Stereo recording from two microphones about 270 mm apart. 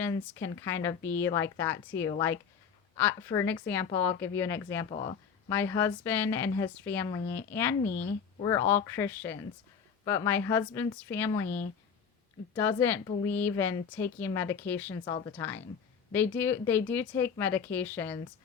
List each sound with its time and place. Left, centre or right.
0.0 s a woman's voice: centre
4.9 s speech: left
5.5 s a woman's voice: centre